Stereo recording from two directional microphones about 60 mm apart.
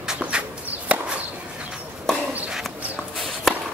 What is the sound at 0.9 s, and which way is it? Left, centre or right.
Chop, right.